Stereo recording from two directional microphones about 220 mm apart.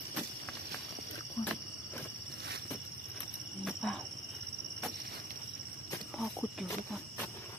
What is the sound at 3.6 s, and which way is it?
Cricket, centre (ahead or behind).